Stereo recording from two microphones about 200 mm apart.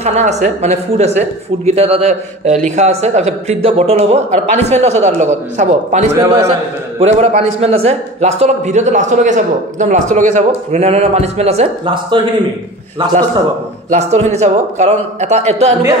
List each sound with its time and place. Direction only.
0.0 s a man's voice: 35° right (ahead or behind)
13.8 s a man's voice: 35° right (ahead or behind)